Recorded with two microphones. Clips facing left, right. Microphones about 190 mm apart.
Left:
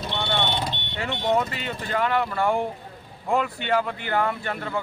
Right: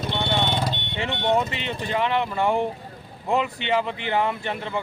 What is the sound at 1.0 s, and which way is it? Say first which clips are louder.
Speech: right 1 dB; 20° right (ahead or behind).